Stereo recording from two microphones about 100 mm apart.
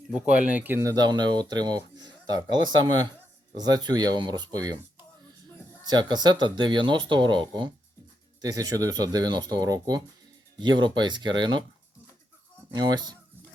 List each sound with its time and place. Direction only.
0.1 s speech: 10° right (ahead or behind)
0.8 s speech: 40° right (ahead or behind)
5.8 s speech: 45° right (ahead or behind)
8.4 s speech: 40° right (ahead or behind)
12.7 s speech: 45° right (ahead or behind)